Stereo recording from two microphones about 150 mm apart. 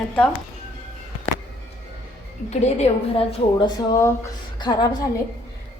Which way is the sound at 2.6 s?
45° left (ahead or behind).